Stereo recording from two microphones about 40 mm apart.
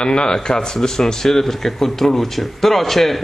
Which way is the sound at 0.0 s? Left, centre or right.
Left.